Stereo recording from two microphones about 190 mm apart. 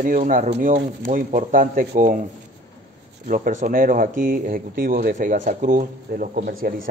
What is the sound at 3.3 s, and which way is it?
Speech, 45° right (ahead or behind).